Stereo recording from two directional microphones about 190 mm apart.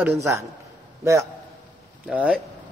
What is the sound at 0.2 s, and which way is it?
Speech, 15° right (ahead or behind).